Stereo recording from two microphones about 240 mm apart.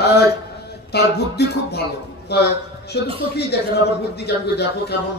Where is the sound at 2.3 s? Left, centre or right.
Left.